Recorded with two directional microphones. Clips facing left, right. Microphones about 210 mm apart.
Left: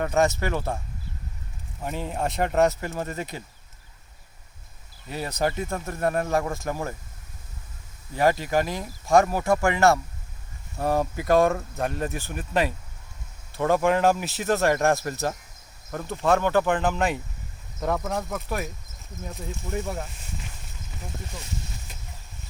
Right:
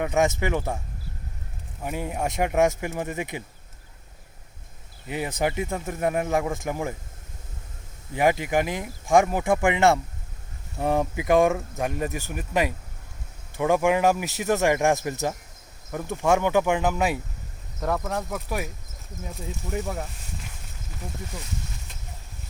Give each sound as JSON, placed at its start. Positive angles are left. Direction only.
{"t": 0.0, "sound": "speech", "side_deg": -15}
{"t": 1.8, "sound": "speech", "side_deg": -10}
{"t": 5.0, "sound": "speech", "side_deg": -15}
{"t": 8.1, "sound": "speech", "side_deg": -15}